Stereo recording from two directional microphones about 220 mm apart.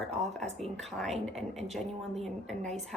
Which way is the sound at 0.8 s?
Centre (ahead or behind).